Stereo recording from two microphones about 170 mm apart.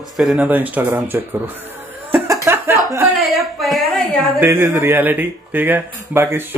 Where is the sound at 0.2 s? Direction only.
5° right (ahead or behind).